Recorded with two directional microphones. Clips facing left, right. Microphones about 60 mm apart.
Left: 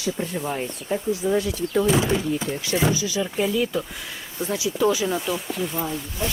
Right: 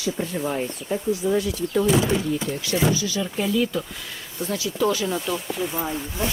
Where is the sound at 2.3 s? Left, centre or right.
Centre.